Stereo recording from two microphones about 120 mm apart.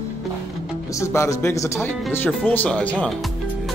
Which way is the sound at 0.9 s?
25° left (ahead or behind).